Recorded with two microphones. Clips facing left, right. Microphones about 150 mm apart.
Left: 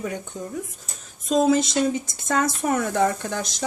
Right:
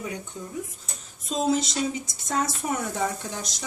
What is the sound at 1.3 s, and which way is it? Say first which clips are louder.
Speech: left 6 dB; 60° left (ahead or behind).